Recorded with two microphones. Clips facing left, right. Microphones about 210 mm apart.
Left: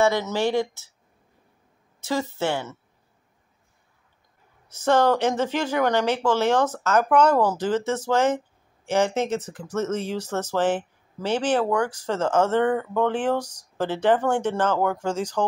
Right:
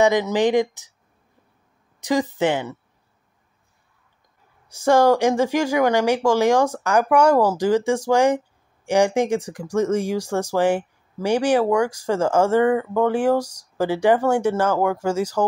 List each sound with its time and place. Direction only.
0.0 s speech: 15° right (ahead or behind)
2.0 s a woman's voice: 15° right (ahead or behind)
4.6 s speech: 10° right (ahead or behind)